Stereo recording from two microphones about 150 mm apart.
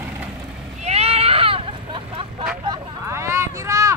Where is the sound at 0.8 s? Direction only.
45° right (ahead or behind).